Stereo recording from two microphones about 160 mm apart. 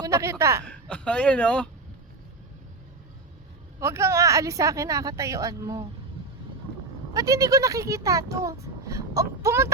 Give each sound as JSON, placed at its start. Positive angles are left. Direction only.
{"t": 0.0, "sound": "speech", "side_deg": -20}
{"t": 0.6, "sound": "a woman's voice", "side_deg": 5}
{"t": 3.8, "sound": "speech", "side_deg": -15}
{"t": 7.1, "sound": "speech", "side_deg": -20}